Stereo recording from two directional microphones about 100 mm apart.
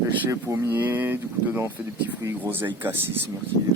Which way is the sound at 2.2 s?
20° right (ahead or behind).